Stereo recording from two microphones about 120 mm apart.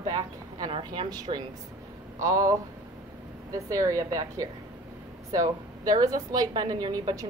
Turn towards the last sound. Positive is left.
turn(degrees=-30)  # may be behind; listen again after turning